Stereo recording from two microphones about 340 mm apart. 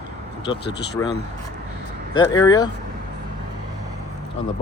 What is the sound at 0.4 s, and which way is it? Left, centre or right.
Speech, centre.